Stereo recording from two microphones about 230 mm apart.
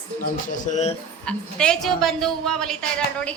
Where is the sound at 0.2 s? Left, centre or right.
Left.